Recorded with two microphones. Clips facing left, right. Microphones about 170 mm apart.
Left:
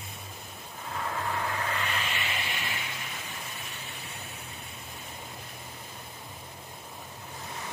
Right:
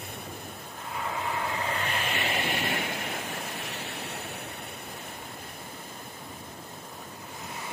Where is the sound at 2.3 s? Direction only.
60° right (ahead or behind).